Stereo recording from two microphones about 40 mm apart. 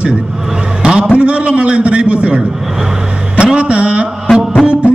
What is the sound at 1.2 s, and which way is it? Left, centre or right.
A man's voice, right.